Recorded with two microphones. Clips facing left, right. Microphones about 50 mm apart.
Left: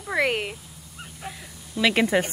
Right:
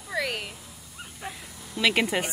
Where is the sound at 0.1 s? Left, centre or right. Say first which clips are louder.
Left 6 dB; left.